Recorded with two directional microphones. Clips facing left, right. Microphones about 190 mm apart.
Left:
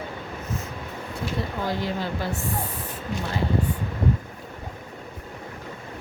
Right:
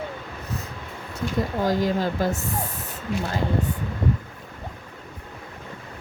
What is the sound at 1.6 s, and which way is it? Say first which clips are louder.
Speech: right 6 dB; 40° right (ahead or behind).